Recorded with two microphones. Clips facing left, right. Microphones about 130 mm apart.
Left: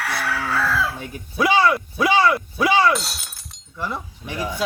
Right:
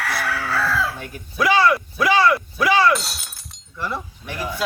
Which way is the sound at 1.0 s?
20° left (ahead or behind).